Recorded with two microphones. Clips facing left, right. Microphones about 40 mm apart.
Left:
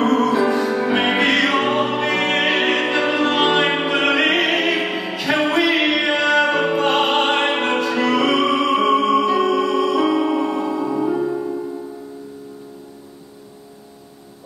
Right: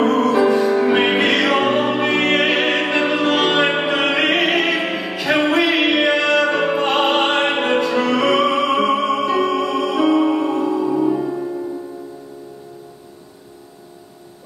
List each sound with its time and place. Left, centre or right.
0.0 s music: centre
3.0 s music: centre
6.2 s music: centre
6.5 s opera: centre
6.8 s music: centre
7.7 s music: centre
10.4 s music: centre